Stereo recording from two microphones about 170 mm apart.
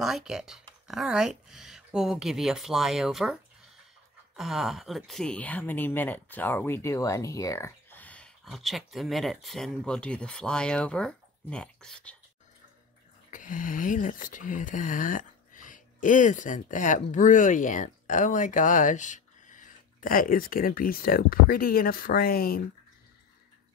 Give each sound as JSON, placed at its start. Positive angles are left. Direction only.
{"t": 0.0, "sound": "speech", "side_deg": 0}
{"t": 4.4, "sound": "speech", "side_deg": 0}
{"t": 13.3, "sound": "speech", "side_deg": 50}